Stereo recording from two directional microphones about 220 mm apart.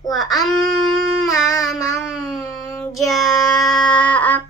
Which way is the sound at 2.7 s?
15° left (ahead or behind).